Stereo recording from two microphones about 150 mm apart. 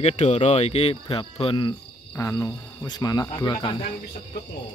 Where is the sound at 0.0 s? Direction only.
45° left (ahead or behind).